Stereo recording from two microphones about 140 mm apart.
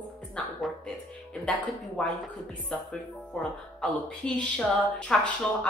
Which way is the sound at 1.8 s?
Centre (ahead or behind).